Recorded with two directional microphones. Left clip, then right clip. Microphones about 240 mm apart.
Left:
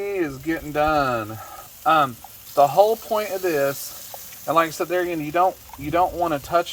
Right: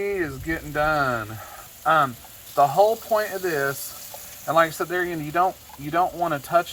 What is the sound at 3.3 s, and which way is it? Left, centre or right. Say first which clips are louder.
Speech: left 3 dB; left.